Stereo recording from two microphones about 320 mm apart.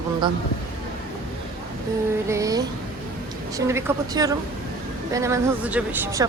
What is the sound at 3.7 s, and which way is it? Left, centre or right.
A woman's voice, centre.